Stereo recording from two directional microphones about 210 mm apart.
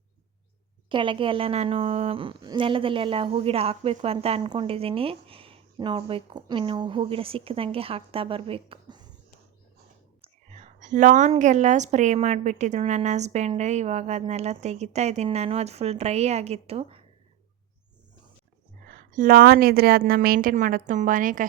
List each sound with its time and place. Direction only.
0.9 s a woman's voice: 25° right (ahead or behind)
10.2 s a woman's voice: 35° right (ahead or behind)
18.9 s a woman's voice: 40° right (ahead or behind)